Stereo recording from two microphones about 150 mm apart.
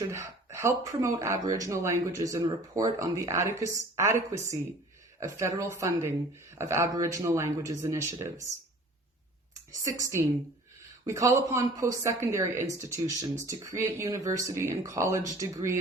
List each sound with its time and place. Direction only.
0.0 s speech: 20° right (ahead or behind)
10.0 s speech: 20° right (ahead or behind)